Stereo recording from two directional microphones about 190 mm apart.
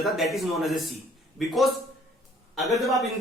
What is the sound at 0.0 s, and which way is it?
A man's voice, centre (ahead or behind).